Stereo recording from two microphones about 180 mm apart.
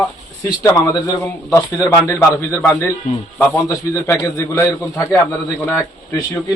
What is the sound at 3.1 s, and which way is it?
Speech, 45° left (ahead or behind).